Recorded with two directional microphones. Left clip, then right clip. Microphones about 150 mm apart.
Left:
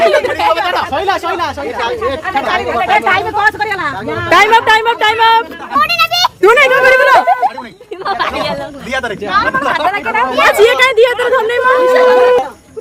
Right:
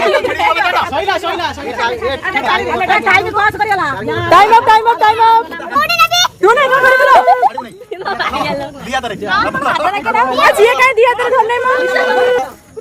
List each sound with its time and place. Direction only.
0.0 s chatter: 15° left (ahead or behind)
0.9 s speech: centre (ahead or behind)
1.8 s speech: 35° left (ahead or behind)
2.2 s speech: 5° left (ahead or behind)
2.7 s speech: 40° left (ahead or behind)
3.0 s speech: 35° right (ahead or behind)
4.3 s speech: 20° left (ahead or behind)
5.7 s a sound: 5° left (ahead or behind)
6.4 s speech: 35° left (ahead or behind)
8.9 s speech: 5° left (ahead or behind)
10.6 s speech: 20° left (ahead or behind)